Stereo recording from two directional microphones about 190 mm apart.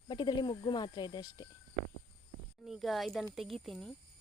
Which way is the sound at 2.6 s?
Centre (ahead or behind).